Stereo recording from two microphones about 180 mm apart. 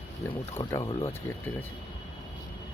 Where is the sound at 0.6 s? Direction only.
20° left (ahead or behind).